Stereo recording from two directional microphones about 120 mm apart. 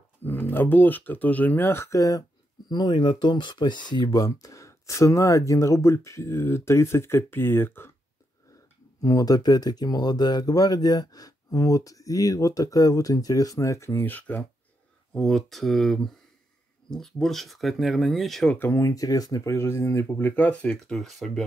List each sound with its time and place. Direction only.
0.2 s speech: 15° left (ahead or behind)
9.0 s speech: 30° left (ahead or behind)
15.1 s speech: centre (ahead or behind)
18.6 s speech: 25° left (ahead or behind); by 21.5 s centre (ahead or behind)